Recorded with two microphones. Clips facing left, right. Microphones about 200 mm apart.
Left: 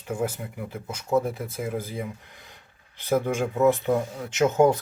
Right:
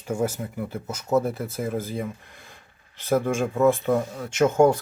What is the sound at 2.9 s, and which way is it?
Speech, 15° left (ahead or behind).